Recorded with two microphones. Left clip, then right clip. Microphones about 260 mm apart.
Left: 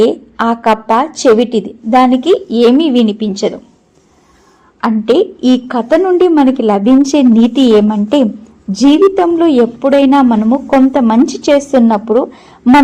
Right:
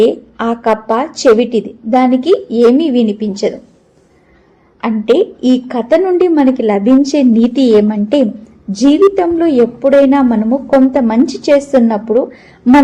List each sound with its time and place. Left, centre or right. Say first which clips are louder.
0.0 s a woman's voice: left 1 dB; left
4.8 s a woman's voice: left 1 dB; left